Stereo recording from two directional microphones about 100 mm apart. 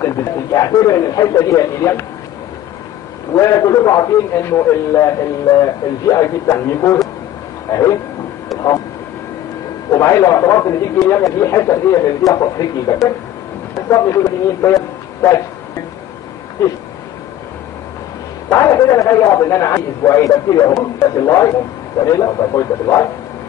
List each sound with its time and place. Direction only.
0.0 s a man's voice: 30° left (ahead or behind)
3.3 s a man's voice: 35° left (ahead or behind)
9.8 s a man's voice: 30° left (ahead or behind)
18.5 s a man's voice: 30° left (ahead or behind)